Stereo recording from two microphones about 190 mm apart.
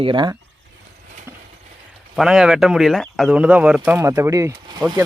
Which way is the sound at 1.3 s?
10° right (ahead or behind).